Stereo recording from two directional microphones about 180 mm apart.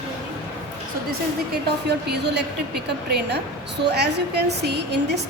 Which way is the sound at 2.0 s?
65° right (ahead or behind).